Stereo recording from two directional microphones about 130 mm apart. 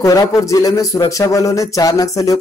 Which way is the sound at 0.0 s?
25° left (ahead or behind).